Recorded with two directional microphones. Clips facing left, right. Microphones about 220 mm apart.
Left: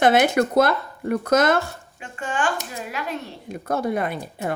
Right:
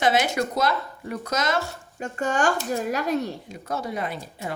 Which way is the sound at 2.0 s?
40° right (ahead or behind).